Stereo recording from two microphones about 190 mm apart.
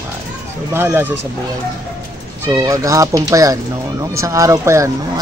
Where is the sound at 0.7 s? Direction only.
10° right (ahead or behind).